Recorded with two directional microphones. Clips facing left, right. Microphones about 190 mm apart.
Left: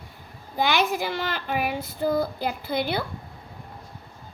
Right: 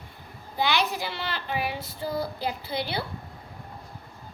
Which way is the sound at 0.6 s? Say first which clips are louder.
Left 3 dB; 50° left (ahead or behind).